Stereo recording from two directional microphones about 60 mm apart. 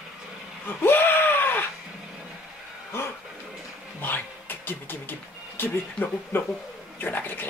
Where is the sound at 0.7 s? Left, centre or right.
Left.